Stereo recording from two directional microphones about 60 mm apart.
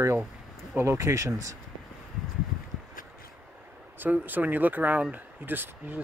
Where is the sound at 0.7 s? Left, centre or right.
Right.